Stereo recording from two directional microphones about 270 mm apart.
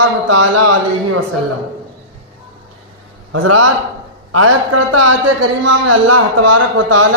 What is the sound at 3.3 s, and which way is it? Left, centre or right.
Speech, right.